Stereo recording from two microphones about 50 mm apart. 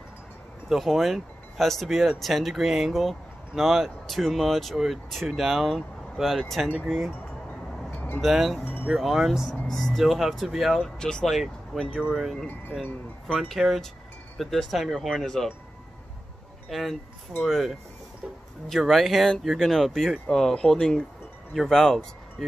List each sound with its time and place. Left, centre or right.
0.7 s speech: centre
8.2 s speech: centre
9.7 s speech: centre
9.9 s speech: centre
11.0 s speech: centre
11.3 s speech: centre
11.9 s speech: centre
13.6 s chime: centre
14.4 s speech: centre
16.6 s speech: centre